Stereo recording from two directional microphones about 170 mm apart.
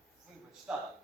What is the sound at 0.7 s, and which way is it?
Speech, 5° right (ahead or behind).